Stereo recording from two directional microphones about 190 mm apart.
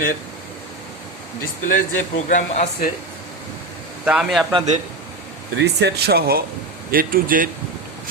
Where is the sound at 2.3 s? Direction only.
40° left (ahead or behind).